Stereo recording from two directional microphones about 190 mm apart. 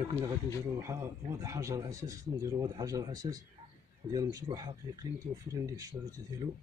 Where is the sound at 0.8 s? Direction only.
15° right (ahead or behind).